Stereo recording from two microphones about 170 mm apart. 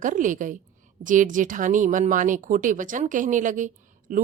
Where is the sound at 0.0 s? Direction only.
50° right (ahead or behind).